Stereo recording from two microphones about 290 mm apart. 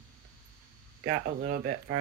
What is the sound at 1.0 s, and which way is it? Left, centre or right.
Speech, right.